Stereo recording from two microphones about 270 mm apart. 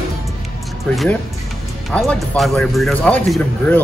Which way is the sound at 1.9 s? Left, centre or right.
Centre.